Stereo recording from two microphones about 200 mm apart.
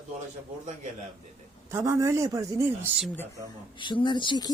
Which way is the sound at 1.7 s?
15° right (ahead or behind).